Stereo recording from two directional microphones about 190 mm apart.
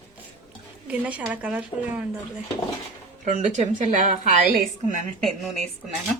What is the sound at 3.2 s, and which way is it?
Speech, 40° right (ahead or behind).